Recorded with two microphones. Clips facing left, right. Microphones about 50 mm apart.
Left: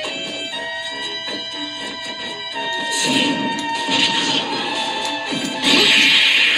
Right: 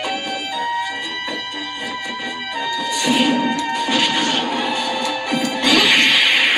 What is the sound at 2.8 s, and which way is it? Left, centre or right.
Music, right.